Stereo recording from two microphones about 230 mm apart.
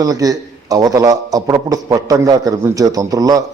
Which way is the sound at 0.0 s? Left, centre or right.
Centre.